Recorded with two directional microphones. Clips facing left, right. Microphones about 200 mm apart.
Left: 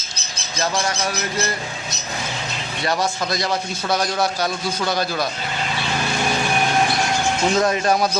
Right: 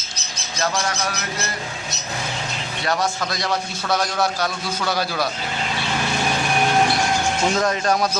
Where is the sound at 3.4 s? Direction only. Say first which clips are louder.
Left 1 dB; 20° left (ahead or behind).